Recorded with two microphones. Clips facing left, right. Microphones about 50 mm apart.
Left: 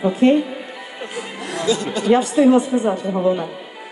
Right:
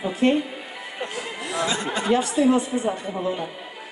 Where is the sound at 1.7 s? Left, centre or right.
Right.